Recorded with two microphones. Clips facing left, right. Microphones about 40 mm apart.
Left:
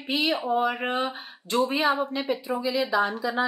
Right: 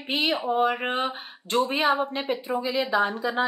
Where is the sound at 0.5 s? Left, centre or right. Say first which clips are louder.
Right 1 dB; right.